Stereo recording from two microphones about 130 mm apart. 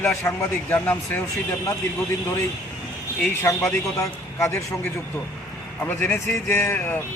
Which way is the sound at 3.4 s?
25° left (ahead or behind).